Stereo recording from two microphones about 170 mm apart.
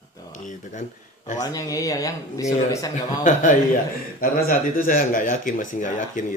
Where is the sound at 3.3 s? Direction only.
50° left (ahead or behind).